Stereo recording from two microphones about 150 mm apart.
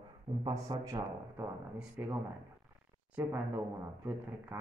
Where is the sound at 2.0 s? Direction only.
10° right (ahead or behind).